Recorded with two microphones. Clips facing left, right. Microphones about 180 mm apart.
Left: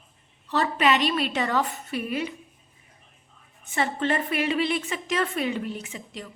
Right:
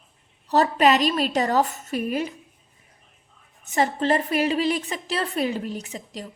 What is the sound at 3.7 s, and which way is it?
A woman's voice, 40° right (ahead or behind).